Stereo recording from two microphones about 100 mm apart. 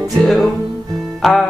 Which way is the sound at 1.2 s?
Centre (ahead or behind).